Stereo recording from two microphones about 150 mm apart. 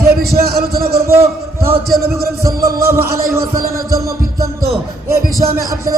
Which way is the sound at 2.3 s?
20° right (ahead or behind).